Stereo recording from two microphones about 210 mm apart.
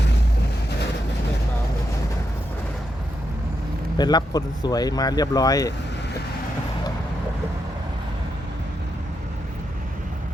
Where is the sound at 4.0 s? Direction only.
20° left (ahead or behind).